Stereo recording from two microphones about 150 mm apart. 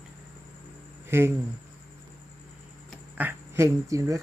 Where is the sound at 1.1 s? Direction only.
15° right (ahead or behind).